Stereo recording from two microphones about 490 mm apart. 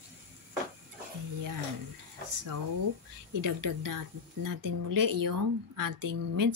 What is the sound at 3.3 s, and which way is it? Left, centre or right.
A woman's voice, right.